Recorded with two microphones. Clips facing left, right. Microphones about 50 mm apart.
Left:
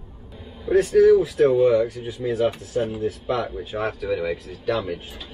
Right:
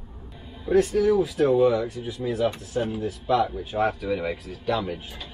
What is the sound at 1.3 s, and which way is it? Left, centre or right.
Speech, left.